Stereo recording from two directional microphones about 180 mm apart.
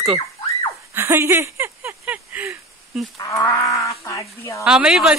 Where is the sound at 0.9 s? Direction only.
15° right (ahead or behind).